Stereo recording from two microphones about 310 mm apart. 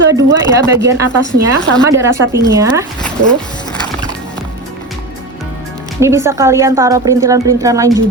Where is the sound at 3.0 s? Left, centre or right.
Centre.